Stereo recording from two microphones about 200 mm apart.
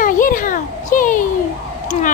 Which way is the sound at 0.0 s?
45° left (ahead or behind).